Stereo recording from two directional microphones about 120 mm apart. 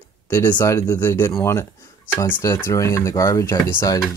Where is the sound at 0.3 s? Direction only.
20° left (ahead or behind).